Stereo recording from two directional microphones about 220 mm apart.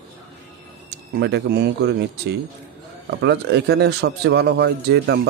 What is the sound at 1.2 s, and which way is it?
Speech, 50° right (ahead or behind).